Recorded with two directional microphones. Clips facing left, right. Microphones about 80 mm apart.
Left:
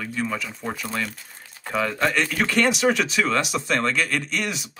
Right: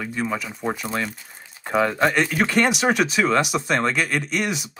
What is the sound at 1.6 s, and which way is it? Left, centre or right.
Speech, right.